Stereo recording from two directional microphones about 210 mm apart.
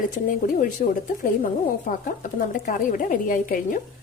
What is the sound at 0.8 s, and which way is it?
A woman's voice, 40° left (ahead or behind).